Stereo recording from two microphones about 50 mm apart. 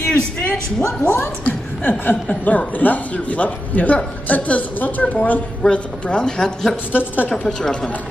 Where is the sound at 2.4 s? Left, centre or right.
Left.